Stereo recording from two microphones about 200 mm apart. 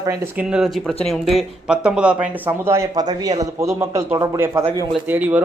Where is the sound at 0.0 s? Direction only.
15° right (ahead or behind).